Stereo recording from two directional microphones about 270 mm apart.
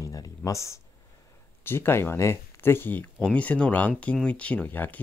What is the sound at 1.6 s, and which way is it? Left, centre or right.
Speech, centre.